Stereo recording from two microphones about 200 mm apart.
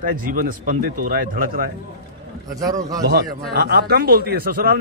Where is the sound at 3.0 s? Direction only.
55° right (ahead or behind).